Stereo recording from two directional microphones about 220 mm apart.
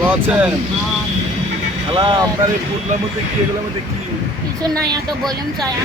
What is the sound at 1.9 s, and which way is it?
Speech, 25° right (ahead or behind).